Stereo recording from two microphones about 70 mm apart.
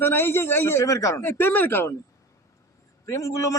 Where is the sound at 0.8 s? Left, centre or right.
Left.